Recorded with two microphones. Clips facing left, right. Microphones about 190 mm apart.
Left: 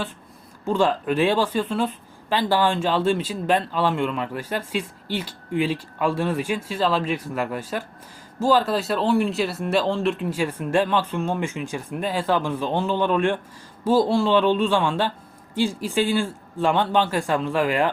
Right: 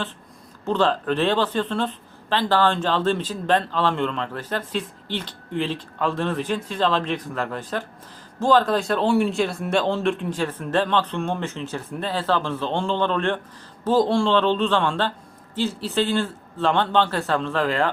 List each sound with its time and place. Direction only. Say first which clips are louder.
0.6 s speech: even; 10° left (ahead or behind)